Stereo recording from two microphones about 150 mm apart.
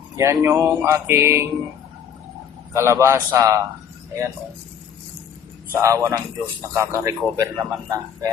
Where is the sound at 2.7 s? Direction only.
20° right (ahead or behind).